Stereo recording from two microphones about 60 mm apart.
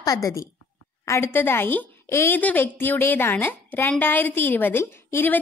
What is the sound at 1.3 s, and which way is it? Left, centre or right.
Speech, left.